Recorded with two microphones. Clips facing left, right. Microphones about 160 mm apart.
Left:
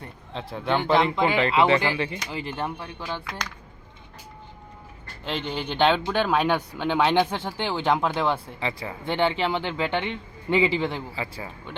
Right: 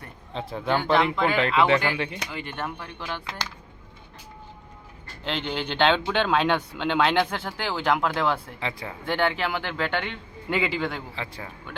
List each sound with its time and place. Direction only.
0.3 s speech: centre (ahead or behind)
2.3 s speech: 30° left (ahead or behind)
2.7 s speech: 10° left (ahead or behind)
5.2 s speech: 10° left (ahead or behind)
8.6 s speech: centre (ahead or behind)
9.0 s speech: 20° left (ahead or behind)
10.8 s speech: 5° left (ahead or behind)